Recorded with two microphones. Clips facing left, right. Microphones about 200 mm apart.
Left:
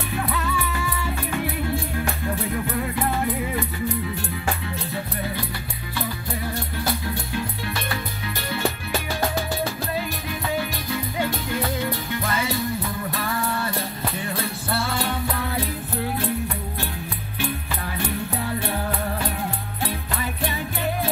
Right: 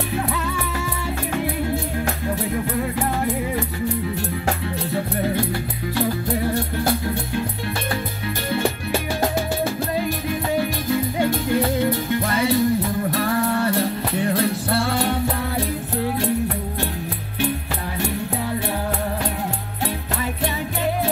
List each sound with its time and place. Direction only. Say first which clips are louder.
4.5 s music: right 4 dB; 55° right (ahead or behind)
6.8 s music: right 5 dB; 55° right (ahead or behind)
10.6 s music: right 6 dB; 50° right (ahead or behind)
12.5 s music: right 7 dB; 40° right (ahead or behind)
13.7 s music: right 7 dB; 70° right (ahead or behind)